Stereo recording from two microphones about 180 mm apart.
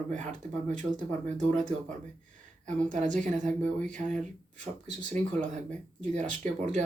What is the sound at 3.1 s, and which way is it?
Speech, 45° right (ahead or behind).